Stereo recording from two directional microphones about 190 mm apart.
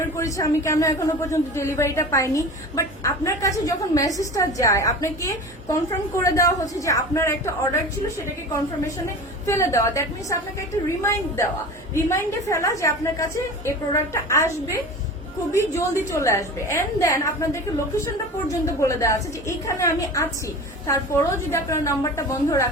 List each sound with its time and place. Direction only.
0.0 s a woman's voice: 15° left (ahead or behind)
9.5 s a woman's voice: 15° left (ahead or behind)
16.0 s a woman's voice: 15° left (ahead or behind)